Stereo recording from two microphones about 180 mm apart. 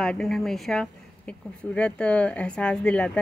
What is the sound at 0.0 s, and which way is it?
Speech, 5° left (ahead or behind).